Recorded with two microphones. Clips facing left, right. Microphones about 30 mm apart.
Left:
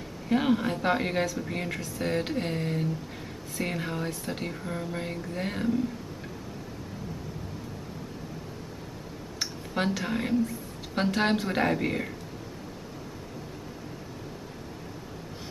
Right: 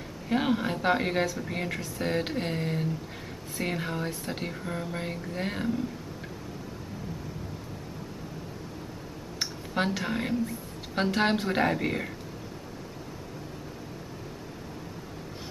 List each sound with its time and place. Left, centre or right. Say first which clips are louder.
0.3 s speech: left 2 dB; centre
9.4 s a sound: even; centre
11.0 s speech: even; centre